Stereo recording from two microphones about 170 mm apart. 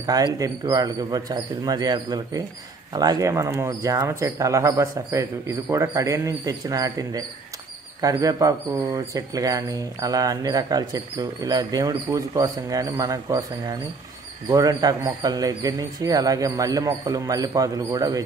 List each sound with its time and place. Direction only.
0.0 s speech: 20° right (ahead or behind)